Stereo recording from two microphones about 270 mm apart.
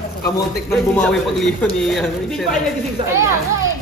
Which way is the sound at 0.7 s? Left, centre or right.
Centre.